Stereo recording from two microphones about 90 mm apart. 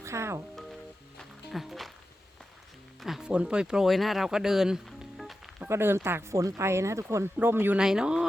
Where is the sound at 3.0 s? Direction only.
5° right (ahead or behind).